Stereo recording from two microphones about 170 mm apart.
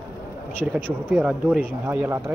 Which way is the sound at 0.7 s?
5° left (ahead or behind).